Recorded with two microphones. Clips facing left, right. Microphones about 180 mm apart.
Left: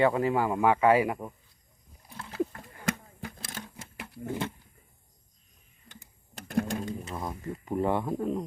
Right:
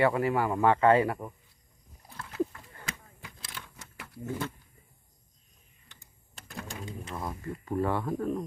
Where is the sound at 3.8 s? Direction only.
30° left (ahead or behind).